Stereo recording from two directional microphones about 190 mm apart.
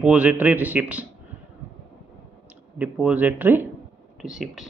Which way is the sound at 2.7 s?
5° right (ahead or behind).